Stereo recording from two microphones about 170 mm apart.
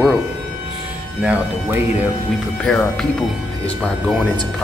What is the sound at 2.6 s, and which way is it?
Speech, 5° left (ahead or behind).